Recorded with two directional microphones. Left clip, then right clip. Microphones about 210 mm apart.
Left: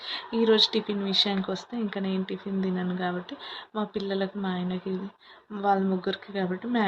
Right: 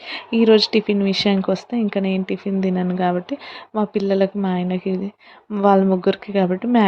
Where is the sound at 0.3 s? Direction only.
45° right (ahead or behind).